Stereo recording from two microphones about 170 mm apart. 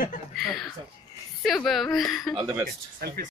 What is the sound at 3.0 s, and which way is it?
Speech, 65° right (ahead or behind).